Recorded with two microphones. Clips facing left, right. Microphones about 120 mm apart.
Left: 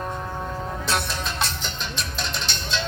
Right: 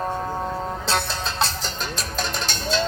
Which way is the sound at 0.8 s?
30° right (ahead or behind).